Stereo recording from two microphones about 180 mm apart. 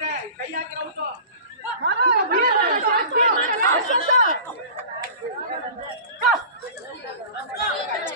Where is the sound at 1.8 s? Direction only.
65° right (ahead or behind).